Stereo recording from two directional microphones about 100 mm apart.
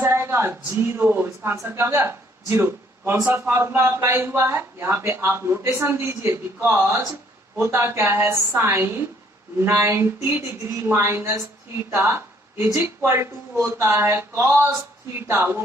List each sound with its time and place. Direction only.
0.0 s speech: 25° right (ahead or behind)